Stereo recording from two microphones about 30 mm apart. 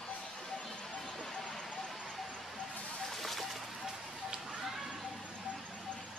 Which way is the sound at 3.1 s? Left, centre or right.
Centre.